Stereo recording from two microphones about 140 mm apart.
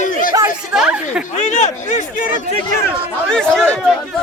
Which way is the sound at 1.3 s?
60° left (ahead or behind).